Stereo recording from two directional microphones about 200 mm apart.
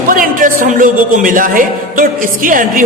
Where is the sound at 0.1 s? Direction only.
45° right (ahead or behind).